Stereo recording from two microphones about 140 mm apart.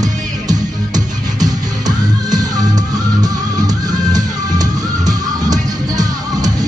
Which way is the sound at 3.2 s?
25° right (ahead or behind).